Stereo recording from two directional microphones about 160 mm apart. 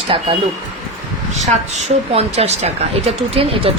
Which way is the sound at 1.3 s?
45° right (ahead or behind).